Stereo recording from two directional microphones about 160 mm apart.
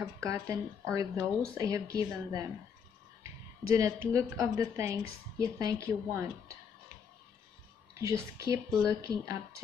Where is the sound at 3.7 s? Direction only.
20° right (ahead or behind).